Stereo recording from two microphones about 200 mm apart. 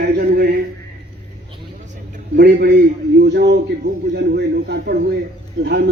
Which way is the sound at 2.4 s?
60° right (ahead or behind).